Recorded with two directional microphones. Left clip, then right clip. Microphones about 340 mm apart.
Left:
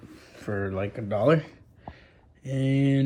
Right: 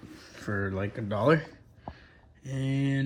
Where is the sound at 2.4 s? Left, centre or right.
Centre.